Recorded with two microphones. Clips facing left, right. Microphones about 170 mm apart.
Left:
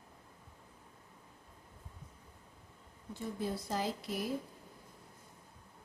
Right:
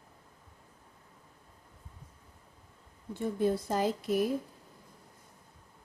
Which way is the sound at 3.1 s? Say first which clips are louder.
Right 9 dB; 55° right (ahead or behind).